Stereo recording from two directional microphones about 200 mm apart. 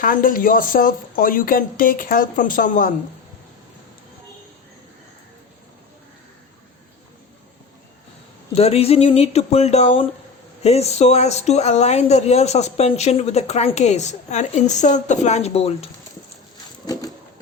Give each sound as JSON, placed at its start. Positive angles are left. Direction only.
{"t": 0.0, "sound": "speech", "side_deg": 40}
{"t": 8.5, "sound": "speech", "side_deg": 30}
{"t": 16.8, "sound": "a sound", "side_deg": 20}